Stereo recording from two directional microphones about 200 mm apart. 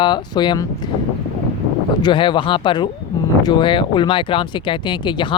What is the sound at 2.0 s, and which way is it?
Speech, 25° left (ahead or behind).